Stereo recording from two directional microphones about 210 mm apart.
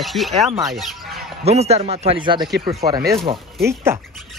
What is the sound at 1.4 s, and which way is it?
A man's voice, 30° right (ahead or behind).